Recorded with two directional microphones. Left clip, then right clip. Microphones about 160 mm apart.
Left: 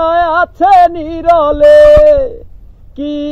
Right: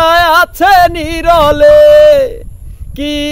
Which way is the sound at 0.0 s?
25° right (ahead or behind).